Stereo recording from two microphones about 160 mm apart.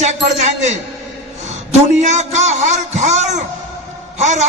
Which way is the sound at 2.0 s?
45° right (ahead or behind).